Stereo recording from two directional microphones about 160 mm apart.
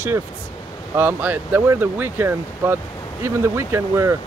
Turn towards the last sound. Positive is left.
turn(degrees=-15)  # may be behind; listen again after turning